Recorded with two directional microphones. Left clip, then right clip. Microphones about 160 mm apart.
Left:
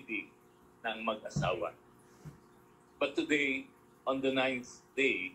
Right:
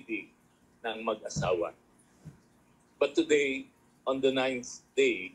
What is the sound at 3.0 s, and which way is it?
Speech, 55° right (ahead or behind).